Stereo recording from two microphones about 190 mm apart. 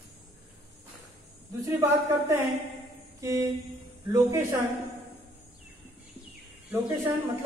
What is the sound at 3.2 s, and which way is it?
Speech, 15° right (ahead or behind).